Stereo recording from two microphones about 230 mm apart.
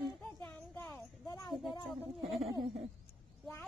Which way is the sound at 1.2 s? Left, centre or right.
Centre.